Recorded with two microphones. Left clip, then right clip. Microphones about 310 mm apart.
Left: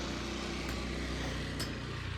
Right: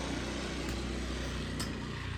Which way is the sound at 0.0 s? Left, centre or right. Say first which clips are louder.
Right 1 dB; right.